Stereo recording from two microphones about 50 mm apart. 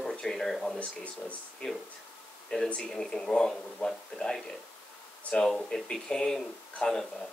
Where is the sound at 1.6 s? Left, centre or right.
Centre.